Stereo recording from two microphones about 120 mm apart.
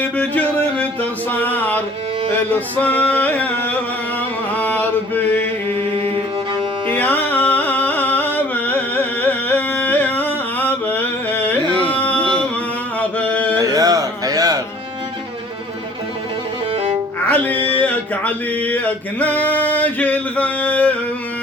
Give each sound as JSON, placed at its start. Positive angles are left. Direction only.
{"t": 0.0, "sound": "a sound", "side_deg": 10}
{"t": 2.3, "sound": "music", "side_deg": 15}
{"t": 4.5, "sound": "chant", "side_deg": 15}
{"t": 6.0, "sound": "music", "side_deg": -50}
{"t": 6.9, "sound": "music", "side_deg": 15}
{"t": 13.0, "sound": "a sound", "side_deg": 10}
{"t": 13.6, "sound": "music", "side_deg": -30}
{"t": 17.2, "sound": "music", "side_deg": 15}
{"t": 17.5, "sound": "a sound", "side_deg": -50}
{"t": 17.7, "sound": "male singing", "side_deg": 10}